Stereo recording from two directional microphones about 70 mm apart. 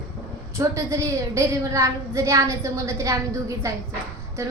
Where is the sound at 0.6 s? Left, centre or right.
Right.